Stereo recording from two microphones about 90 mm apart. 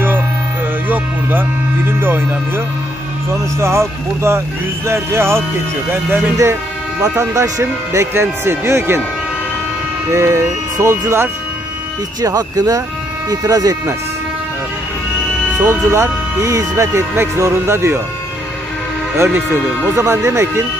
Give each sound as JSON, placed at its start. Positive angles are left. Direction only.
{"t": 0.8, "sound": "music", "side_deg": -20}
{"t": 3.5, "sound": "speech", "side_deg": -30}
{"t": 6.3, "sound": "speech", "side_deg": -35}
{"t": 10.0, "sound": "speech", "side_deg": -30}
{"t": 12.2, "sound": "speech", "side_deg": -45}
{"t": 15.6, "sound": "speech", "side_deg": -30}
{"t": 19.1, "sound": "speech", "side_deg": -30}